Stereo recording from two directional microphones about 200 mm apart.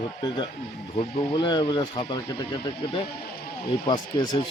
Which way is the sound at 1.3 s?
25° left (ahead or behind).